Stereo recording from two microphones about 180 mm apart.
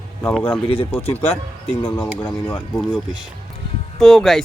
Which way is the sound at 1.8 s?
10° left (ahead or behind).